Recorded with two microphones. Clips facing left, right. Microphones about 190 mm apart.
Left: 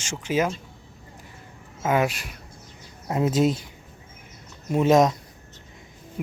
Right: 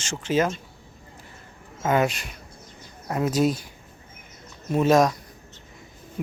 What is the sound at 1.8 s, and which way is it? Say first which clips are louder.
Speech: right 1 dB; 5° left (ahead or behind).